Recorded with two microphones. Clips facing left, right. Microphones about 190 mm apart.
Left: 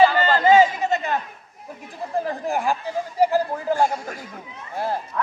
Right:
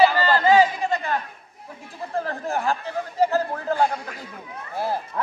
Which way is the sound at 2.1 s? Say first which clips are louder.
Left 2 dB; 15° left (ahead or behind).